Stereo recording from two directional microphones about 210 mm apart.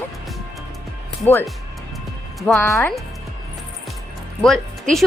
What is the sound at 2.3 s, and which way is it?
Speech, centre (ahead or behind).